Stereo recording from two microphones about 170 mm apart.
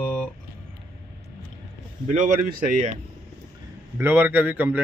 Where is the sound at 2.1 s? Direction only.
50° right (ahead or behind).